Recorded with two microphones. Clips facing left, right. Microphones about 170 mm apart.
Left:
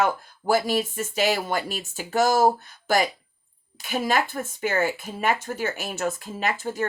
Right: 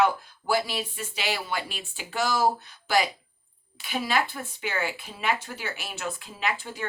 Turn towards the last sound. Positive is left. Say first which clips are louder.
# left 5 dB
turn(degrees=45)  # may be behind; listen again after turning